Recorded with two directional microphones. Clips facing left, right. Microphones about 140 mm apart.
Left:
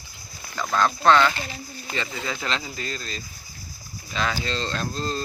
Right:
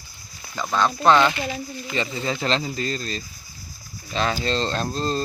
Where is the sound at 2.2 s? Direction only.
30° right (ahead or behind).